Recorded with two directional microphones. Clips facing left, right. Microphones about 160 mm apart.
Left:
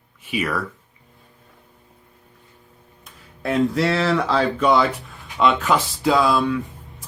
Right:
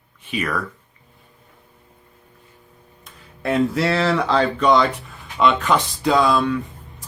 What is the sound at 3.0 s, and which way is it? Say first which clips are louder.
Speech: right 2 dB; centre (ahead or behind).